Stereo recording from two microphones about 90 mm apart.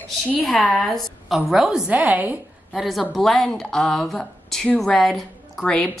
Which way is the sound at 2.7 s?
Centre (ahead or behind).